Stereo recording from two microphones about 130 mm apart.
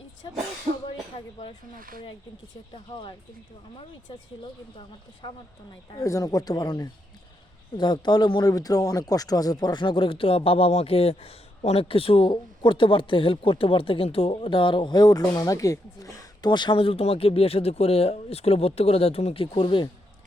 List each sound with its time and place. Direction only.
0.9 s speech: 40° left (ahead or behind)
4.1 s speech: 40° left (ahead or behind)
5.9 s speech: 25° left (ahead or behind); by 19.9 s 40° left (ahead or behind)